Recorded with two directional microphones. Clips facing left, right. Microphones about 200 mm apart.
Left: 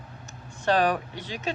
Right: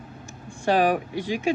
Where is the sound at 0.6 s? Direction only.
10° right (ahead or behind).